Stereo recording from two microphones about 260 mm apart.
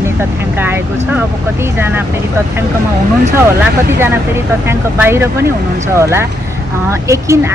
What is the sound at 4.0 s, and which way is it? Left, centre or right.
Speech, centre.